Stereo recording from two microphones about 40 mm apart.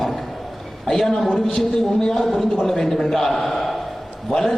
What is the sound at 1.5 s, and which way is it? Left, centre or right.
Speech, centre.